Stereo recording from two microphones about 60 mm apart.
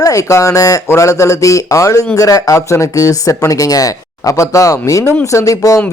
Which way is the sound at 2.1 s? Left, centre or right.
Left.